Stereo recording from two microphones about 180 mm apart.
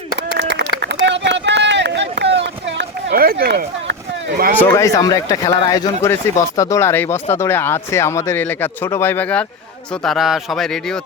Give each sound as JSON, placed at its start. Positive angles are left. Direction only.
{"t": 0.8, "sound": "run", "side_deg": -70}
{"t": 4.6, "sound": "speech", "side_deg": 15}